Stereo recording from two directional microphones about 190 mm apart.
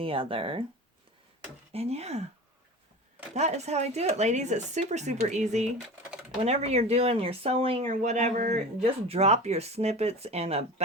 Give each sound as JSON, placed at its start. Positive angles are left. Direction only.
{"t": 0.0, "sound": "speech", "side_deg": -30}
{"t": 1.7, "sound": "speech", "side_deg": -35}
{"t": 3.3, "sound": "speech", "side_deg": -35}